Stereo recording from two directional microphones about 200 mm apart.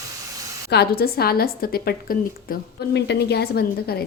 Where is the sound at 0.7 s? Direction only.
50° left (ahead or behind).